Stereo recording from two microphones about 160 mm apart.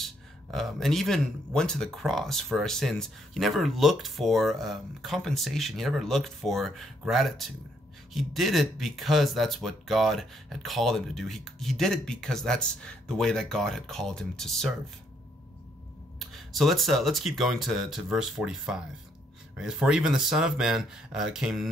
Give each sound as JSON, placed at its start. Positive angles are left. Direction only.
{"t": 0.0, "sound": "speech", "side_deg": 0}
{"t": 16.2, "sound": "speech", "side_deg": 0}